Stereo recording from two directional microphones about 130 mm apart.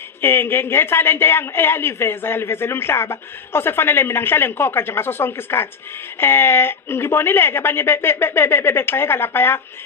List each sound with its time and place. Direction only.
0.2 s speech: 15° left (ahead or behind)